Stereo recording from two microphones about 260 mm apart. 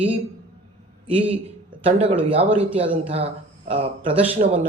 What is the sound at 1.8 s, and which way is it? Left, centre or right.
Speech, right.